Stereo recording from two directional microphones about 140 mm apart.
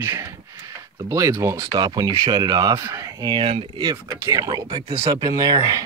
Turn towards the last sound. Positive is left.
turn(degrees=-25)  # may be behind; listen again after turning